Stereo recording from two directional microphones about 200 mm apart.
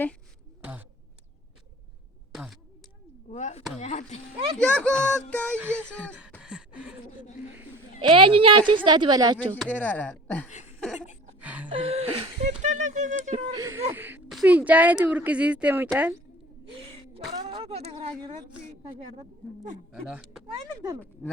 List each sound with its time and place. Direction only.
0.6 s a sound: 10° right (ahead or behind)
2.3 s speech: centre (ahead or behind)
3.2 s speech: 35° left (ahead or behind)
4.5 s speech: 5° left (ahead or behind)
6.4 s a sound: 5° right (ahead or behind)
8.0 s a woman's voice: 25° right (ahead or behind)
9.4 s speech: 5° left (ahead or behind)
11.3 s music: 5° right (ahead or behind)
11.7 s speech: 30° right (ahead or behind)
13.5 s speech: 15° right (ahead or behind)
17.3 s a woman's voice: 25° right (ahead or behind)
19.9 s speech: 5° right (ahead or behind)